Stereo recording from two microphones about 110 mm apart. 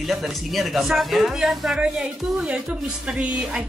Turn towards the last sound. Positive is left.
turn(degrees=-10)  # may be behind; listen again after turning